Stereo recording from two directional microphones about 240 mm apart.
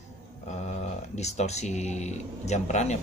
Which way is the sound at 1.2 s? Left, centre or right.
Left.